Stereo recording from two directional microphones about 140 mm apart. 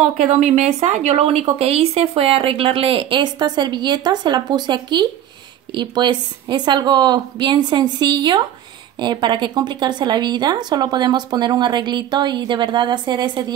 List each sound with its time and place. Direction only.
0.0 s speech: 55° right (ahead or behind); by 13.5 s 30° right (ahead or behind)